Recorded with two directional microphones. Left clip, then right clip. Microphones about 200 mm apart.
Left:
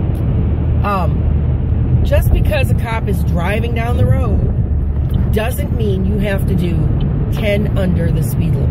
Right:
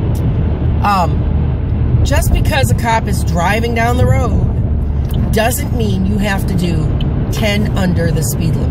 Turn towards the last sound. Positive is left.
turn(degrees=-15)  # may be behind; listen again after turning